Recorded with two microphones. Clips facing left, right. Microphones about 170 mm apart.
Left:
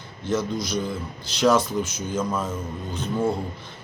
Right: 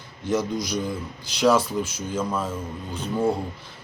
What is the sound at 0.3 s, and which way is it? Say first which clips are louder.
Speech: right 1 dB; 15° right (ahead or behind).